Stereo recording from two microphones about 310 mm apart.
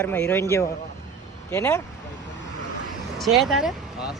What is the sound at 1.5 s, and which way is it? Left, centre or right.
Speech, centre.